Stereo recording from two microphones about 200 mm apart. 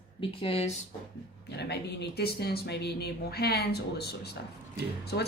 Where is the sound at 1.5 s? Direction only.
55° left (ahead or behind).